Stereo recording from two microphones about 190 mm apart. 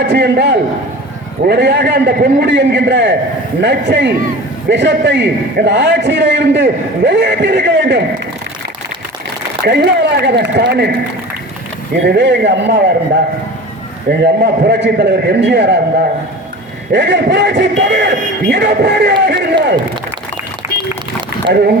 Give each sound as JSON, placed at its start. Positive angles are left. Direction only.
{"t": 0.0, "sound": "a man's voice", "side_deg": -60}
{"t": 9.6, "sound": "a man's voice", "side_deg": -65}
{"t": 12.0, "sound": "a man's voice", "side_deg": -65}
{"t": 14.1, "sound": "a man's voice", "side_deg": -60}
{"t": 16.9, "sound": "a man's voice", "side_deg": -65}
{"t": 21.5, "sound": "a man's voice", "side_deg": -55}